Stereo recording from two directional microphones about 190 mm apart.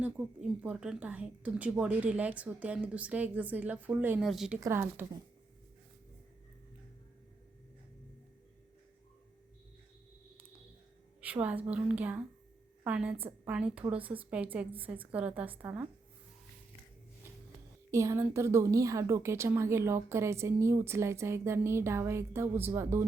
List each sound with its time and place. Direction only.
0.0 s a woman's voice: 5° right (ahead or behind)
4.6 s a woman's voice: 10° right (ahead or behind)
11.2 s a woman's voice: 10° right (ahead or behind)
17.9 s a woman's voice: 15° right (ahead or behind)